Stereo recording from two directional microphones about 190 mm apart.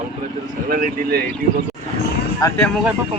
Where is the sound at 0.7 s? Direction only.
45° right (ahead or behind).